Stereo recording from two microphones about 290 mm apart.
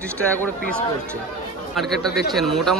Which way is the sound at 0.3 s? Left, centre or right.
Centre.